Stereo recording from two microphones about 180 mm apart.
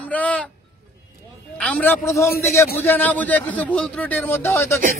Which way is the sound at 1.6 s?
10° left (ahead or behind).